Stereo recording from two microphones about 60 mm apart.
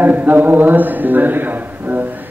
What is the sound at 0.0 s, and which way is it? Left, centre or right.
A man's voice, right.